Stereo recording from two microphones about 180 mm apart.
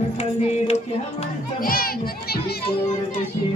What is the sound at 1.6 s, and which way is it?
Children playing, 55° left (ahead or behind).